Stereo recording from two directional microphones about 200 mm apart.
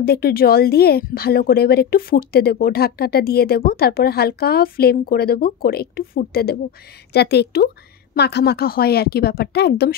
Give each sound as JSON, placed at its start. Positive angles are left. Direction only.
{"t": 0.0, "sound": "speech", "side_deg": 50}